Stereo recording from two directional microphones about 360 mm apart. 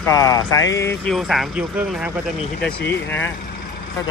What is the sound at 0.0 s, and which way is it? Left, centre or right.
Speech, centre.